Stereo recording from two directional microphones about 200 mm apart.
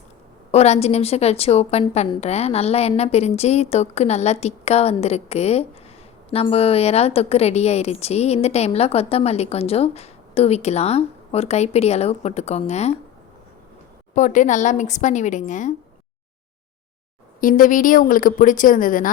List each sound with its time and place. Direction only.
0.5 s a woman's voice: 30° left (ahead or behind)
14.2 s a woman's voice: 40° left (ahead or behind)
17.4 s a woman's voice: 45° left (ahead or behind)